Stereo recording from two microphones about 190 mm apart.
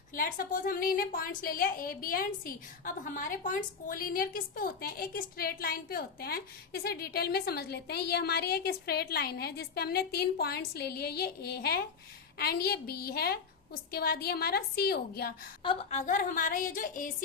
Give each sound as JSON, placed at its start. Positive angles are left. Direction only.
{"t": 0.1, "sound": "a woman's voice", "side_deg": 45}
{"t": 15.6, "sound": "a woman's voice", "side_deg": 30}